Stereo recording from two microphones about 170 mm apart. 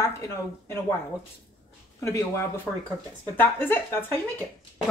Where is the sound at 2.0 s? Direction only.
20° left (ahead or behind).